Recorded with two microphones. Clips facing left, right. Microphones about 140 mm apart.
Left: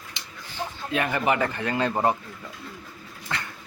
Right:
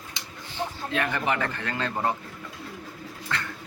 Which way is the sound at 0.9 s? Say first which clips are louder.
Left 4 dB; 10° left (ahead or behind).